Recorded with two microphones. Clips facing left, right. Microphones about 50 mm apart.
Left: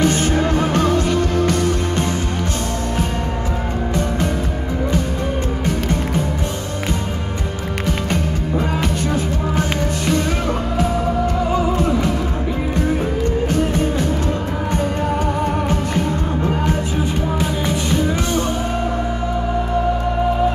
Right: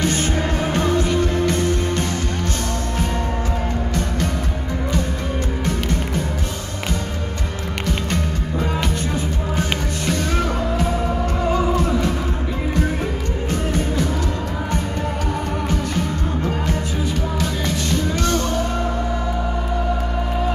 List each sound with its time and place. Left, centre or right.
0.0 s music: left
9.1 s music: left
13.5 s music: left
17.4 s music: centre